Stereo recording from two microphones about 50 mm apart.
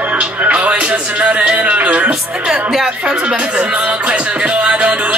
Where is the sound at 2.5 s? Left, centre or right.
Centre.